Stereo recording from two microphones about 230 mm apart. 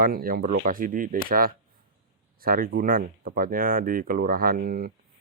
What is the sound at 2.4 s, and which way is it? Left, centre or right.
Speech, right.